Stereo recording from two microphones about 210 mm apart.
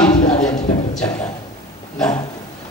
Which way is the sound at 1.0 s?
5° left (ahead or behind).